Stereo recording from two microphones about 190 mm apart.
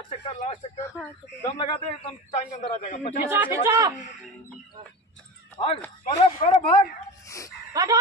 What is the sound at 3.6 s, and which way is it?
Speech, 20° right (ahead or behind).